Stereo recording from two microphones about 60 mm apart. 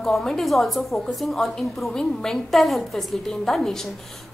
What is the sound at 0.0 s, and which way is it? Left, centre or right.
A woman's voice, centre.